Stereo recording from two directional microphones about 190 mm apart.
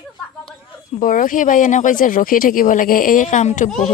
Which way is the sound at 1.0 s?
45° left (ahead or behind).